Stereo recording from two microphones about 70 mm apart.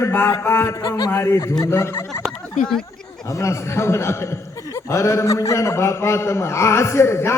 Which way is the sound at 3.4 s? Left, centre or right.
Left.